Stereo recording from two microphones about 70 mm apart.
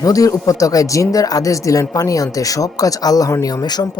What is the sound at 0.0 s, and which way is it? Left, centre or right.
Speech, left.